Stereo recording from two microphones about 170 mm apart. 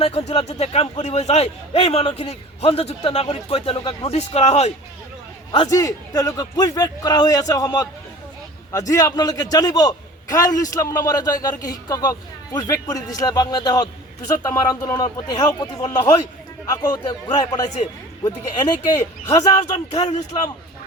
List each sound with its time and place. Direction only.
0.0 s a man's voice: 35° left (ahead or behind)
5.5 s a man's voice: 25° left (ahead or behind)
8.9 s a man's voice: 20° left (ahead or behind)